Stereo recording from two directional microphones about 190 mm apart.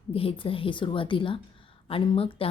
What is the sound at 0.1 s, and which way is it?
Speech, 30° left (ahead or behind).